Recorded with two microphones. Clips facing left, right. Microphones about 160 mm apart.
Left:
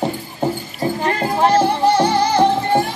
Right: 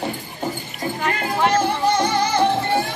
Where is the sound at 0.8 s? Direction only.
30° left (ahead or behind).